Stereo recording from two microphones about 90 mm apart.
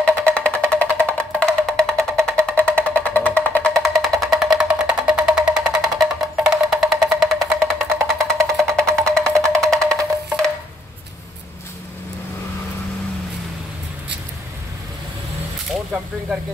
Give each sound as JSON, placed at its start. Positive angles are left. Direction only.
{"t": 0.2, "sound": "music", "side_deg": 15}
{"t": 3.7, "sound": "music", "side_deg": 0}
{"t": 7.3, "sound": "music", "side_deg": -35}
{"t": 8.3, "sound": "music", "side_deg": 5}
{"t": 15.7, "sound": "a sound", "side_deg": -10}